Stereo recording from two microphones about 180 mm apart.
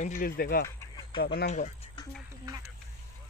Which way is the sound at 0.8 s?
25° left (ahead or behind).